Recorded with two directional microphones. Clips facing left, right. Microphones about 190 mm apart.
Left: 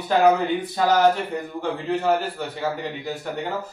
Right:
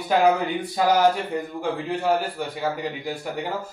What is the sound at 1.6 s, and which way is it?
Speech, 10° right (ahead or behind).